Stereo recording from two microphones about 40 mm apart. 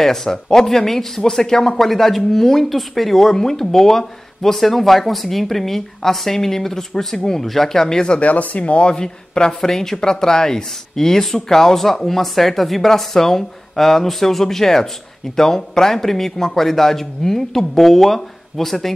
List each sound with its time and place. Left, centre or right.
0.0 s speech: centre
8.2 s speech: left
8.9 s speech: centre